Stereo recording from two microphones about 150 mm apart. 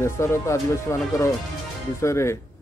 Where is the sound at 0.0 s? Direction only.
20° left (ahead or behind).